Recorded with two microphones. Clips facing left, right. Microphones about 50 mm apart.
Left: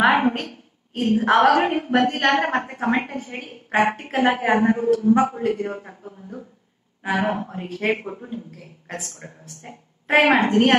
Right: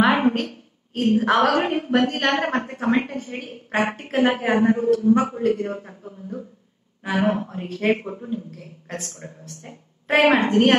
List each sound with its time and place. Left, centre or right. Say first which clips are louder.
0.1 s a sound: even; left
0.4 s a woman's voice: right 4 dB; centre; by 2.8 s left
3.2 s a woman's voice: right 1 dB; centre